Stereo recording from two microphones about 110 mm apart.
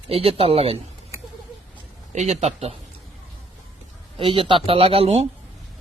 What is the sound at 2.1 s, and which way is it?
Speech, 90° right.